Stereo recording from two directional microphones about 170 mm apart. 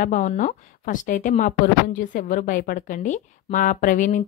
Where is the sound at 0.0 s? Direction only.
50° left (ahead or behind).